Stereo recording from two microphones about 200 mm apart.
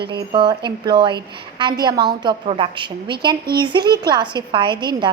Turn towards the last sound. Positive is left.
turn(degrees=-20)  # may be behind; listen again after turning